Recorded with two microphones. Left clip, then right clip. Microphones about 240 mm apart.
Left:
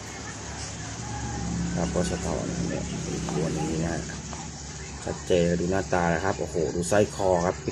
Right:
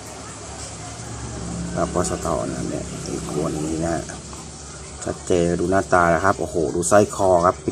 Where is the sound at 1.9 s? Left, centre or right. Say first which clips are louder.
Right 4 dB; right.